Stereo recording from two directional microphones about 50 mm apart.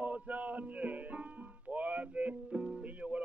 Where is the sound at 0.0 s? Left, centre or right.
Right.